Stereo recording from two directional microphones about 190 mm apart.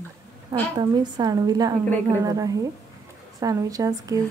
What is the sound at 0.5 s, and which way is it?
Speech, 20° right (ahead or behind).